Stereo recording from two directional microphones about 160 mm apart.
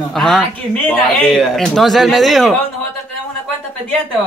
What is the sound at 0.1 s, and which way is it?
Speech, 5° left (ahead or behind).